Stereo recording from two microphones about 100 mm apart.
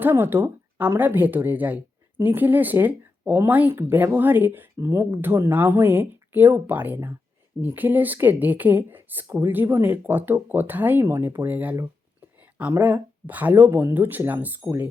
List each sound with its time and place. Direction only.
0.0 s speech: 20° right (ahead or behind)
12.4 s a sound: 15° right (ahead or behind)
12.8 s speech: 15° right (ahead or behind)